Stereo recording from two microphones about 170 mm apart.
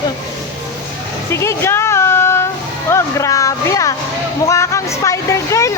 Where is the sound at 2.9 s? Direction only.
15° left (ahead or behind).